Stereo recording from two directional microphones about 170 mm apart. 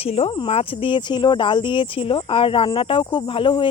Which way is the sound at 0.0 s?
35° left (ahead or behind).